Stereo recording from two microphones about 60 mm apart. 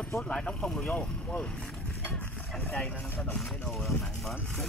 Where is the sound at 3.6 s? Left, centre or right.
Centre.